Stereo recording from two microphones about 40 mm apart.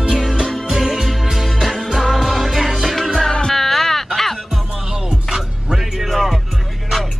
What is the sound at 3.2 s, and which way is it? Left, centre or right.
Music, left.